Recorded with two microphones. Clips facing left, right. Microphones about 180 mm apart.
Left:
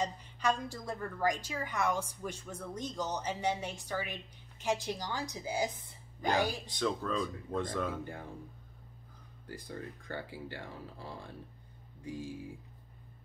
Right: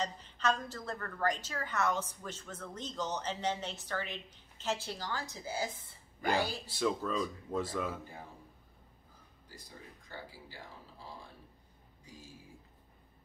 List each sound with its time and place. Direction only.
0.0 s a woman's voice: 10° left (ahead or behind)
6.6 s speech: 5° right (ahead or behind)
9.5 s speech: 60° left (ahead or behind)
12.0 s music: 60° left (ahead or behind)